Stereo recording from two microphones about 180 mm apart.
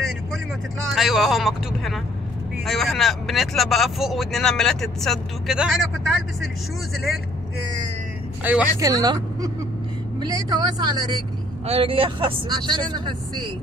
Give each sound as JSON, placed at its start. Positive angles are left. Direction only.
{"t": 0.9, "sound": "speech", "side_deg": 0}
{"t": 8.7, "sound": "speech", "side_deg": -20}